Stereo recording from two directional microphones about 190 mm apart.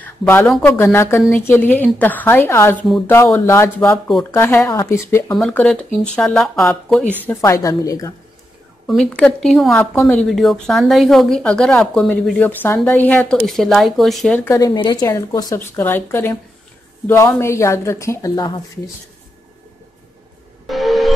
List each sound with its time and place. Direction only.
0.0 s speech: 10° left (ahead or behind)
5.4 s speech: 5° left (ahead or behind)
7.2 s speech: 15° left (ahead or behind)
8.8 s speech: 5° left (ahead or behind); by 18.6 s 20° left (ahead or behind)
20.6 s music: centre (ahead or behind)